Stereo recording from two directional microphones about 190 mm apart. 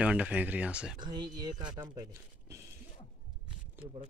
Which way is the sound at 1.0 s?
25° right (ahead or behind).